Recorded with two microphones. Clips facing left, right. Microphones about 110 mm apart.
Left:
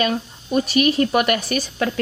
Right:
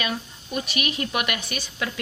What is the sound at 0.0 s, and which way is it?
Speech, 40° left (ahead or behind).